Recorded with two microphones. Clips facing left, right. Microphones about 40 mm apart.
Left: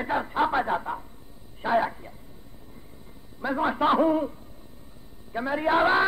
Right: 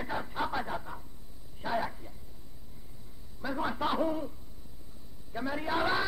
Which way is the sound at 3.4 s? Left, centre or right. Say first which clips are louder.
Left 8 dB; left.